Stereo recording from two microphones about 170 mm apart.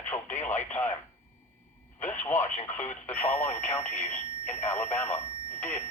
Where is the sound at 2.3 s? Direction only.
45° left (ahead or behind).